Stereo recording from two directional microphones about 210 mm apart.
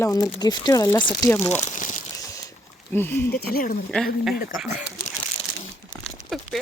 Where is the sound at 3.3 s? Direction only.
45° left (ahead or behind).